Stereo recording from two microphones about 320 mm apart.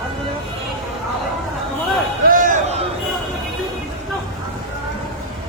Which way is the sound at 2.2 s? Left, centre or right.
Right.